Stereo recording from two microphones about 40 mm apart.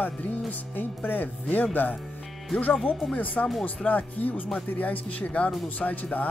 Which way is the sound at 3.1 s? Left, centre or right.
Left.